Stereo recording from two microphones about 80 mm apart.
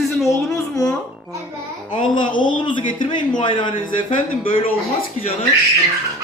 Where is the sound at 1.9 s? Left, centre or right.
Left.